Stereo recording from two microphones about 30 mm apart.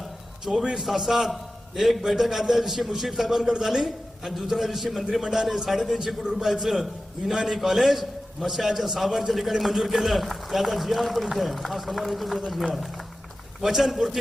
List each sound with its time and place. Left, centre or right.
0.6 s a man's voice: right
0.9 s a man's voice: centre
13.6 s a man's voice: centre